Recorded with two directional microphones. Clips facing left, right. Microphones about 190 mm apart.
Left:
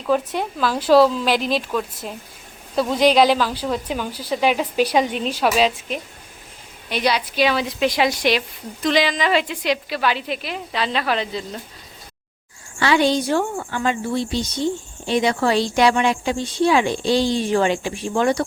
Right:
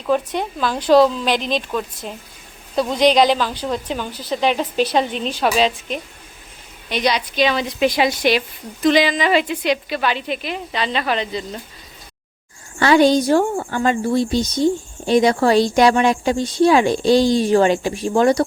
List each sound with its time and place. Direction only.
0.0 s a woman's voice: 5° left (ahead or behind)
12.8 s a woman's voice: 45° right (ahead or behind)